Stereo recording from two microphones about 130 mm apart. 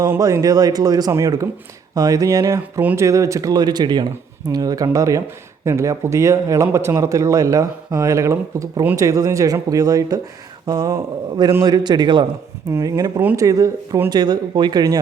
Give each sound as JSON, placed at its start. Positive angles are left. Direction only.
{"t": 0.0, "sound": "speech", "side_deg": -25}
{"t": 12.7, "sound": "speech", "side_deg": -25}